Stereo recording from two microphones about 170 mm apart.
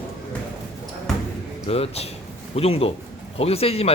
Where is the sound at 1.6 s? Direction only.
35° left (ahead or behind).